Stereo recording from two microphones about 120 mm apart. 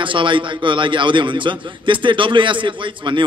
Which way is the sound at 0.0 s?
45° right (ahead or behind).